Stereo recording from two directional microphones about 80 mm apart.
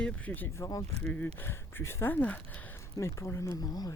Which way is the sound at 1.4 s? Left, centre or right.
Left.